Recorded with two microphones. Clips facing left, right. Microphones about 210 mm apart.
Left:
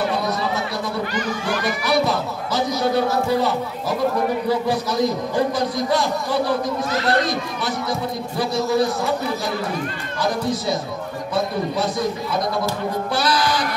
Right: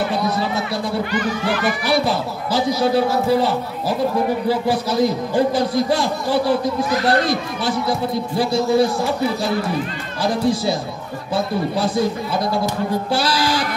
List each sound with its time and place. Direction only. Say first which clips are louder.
1.9 s speech: even; 30° right (ahead or behind)
8.4 s speech: right 3 dB; 30° right (ahead or behind)
10.2 s speech: right 4 dB; 30° right (ahead or behind)
13.1 s speech: left 1 dB; 30° right (ahead or behind)